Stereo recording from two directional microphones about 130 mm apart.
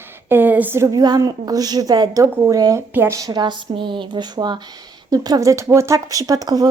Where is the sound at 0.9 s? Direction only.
30° right (ahead or behind).